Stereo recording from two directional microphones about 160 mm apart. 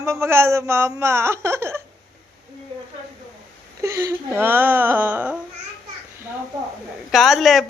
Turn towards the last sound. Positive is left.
turn(degrees=0)  # may be behind; listen again after turning